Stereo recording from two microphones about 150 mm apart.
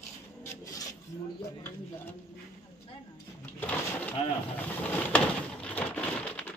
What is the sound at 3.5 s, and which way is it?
Speech, 10° left (ahead or behind).